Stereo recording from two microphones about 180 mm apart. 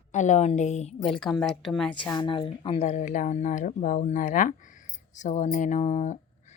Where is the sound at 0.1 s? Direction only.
40° left (ahead or behind).